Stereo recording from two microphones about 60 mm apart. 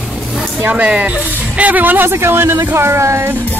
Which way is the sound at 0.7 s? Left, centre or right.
Right.